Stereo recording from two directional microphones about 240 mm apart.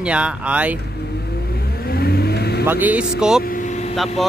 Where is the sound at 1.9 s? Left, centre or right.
Left.